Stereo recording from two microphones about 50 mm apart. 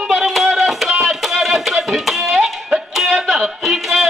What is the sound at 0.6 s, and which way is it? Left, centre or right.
Music, centre.